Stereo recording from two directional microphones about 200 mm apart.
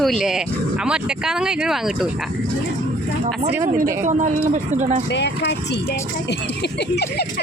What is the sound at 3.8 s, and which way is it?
Speech, 40° right (ahead or behind).